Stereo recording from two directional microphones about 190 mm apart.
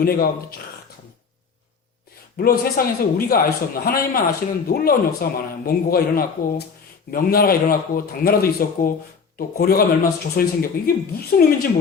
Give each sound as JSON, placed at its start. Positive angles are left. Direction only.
{"t": 0.0, "sound": "a man's voice", "side_deg": 55}
{"t": 2.4, "sound": "a man's voice", "side_deg": 50}